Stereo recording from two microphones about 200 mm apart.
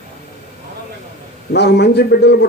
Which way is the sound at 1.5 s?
55° left (ahead or behind).